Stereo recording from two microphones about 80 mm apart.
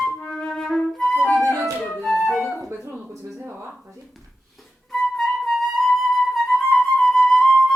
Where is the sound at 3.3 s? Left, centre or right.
Right.